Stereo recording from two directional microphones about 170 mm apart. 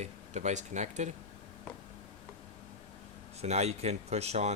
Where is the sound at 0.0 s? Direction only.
45° right (ahead or behind).